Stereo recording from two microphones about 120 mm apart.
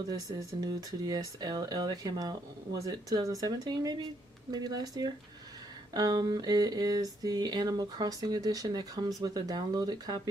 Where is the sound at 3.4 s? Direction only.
30° right (ahead or behind).